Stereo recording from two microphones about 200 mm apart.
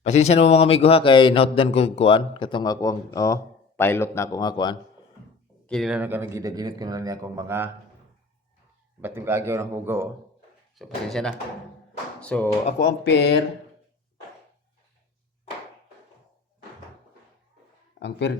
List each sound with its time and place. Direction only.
0.0 s speech: 35° left (ahead or behind)
5.6 s speech: centre (ahead or behind)
9.0 s speech: 10° right (ahead or behind)
10.8 s speech: centre (ahead or behind)
12.8 s speech: 60° left (ahead or behind)
18.0 s speech: 60° left (ahead or behind)